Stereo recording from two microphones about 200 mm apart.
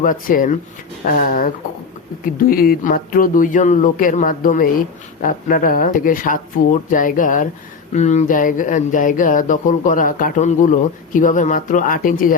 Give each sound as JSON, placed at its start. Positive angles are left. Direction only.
{"t": 0.0, "sound": "speech", "side_deg": 45}